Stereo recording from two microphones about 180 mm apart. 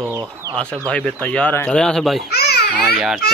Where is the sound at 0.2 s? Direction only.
20° right (ahead or behind).